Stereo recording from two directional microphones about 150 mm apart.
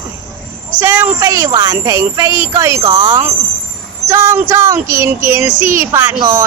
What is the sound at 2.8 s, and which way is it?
Speech, 30° right (ahead or behind).